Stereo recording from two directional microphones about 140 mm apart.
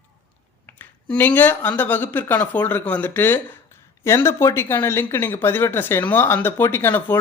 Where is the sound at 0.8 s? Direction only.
15° left (ahead or behind).